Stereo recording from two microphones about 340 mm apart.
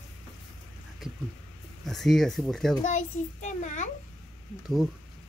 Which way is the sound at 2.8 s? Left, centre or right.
Left.